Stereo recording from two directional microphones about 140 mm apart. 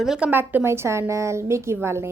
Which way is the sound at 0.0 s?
5° right (ahead or behind).